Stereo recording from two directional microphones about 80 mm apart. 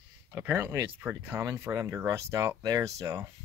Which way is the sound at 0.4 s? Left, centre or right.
Right.